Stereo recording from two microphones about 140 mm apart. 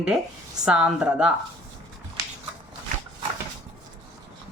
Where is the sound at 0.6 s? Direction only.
5° right (ahead or behind).